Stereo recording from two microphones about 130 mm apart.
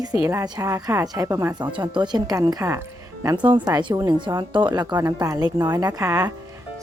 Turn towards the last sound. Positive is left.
turn(degrees=-25)  # may be behind; listen again after turning